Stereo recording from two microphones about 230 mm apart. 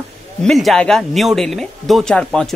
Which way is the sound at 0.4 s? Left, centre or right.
Centre.